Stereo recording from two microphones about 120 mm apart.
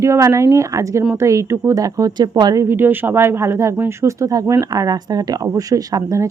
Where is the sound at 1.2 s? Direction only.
25° right (ahead or behind).